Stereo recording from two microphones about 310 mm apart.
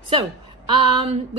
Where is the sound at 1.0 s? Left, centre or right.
Centre.